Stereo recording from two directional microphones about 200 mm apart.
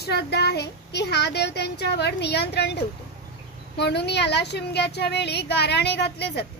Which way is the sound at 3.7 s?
55° left (ahead or behind).